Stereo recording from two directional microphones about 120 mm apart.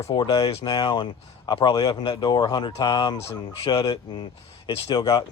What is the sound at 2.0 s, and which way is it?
Speech, 45° left (ahead or behind).